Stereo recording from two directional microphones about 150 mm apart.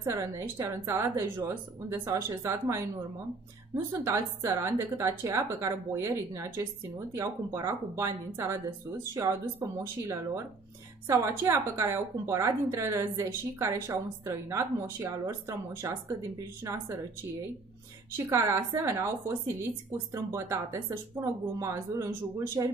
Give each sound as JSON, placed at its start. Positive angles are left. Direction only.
{"t": 0.0, "sound": "a woman's voice", "side_deg": -20}
{"t": 9.6, "sound": "a woman's voice", "side_deg": -15}
{"t": 18.1, "sound": "a woman's voice", "side_deg": -20}